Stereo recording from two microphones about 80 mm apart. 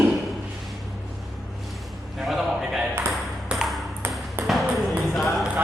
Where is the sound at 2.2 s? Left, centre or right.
Centre.